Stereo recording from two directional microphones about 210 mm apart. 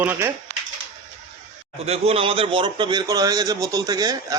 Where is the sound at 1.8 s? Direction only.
30° right (ahead or behind).